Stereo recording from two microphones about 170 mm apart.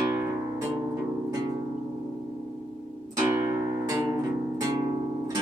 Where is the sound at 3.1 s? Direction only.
20° right (ahead or behind).